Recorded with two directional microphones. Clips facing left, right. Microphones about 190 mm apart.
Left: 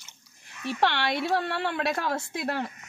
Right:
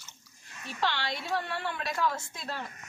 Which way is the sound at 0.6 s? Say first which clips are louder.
Left 7 dB; 70° left (ahead or behind).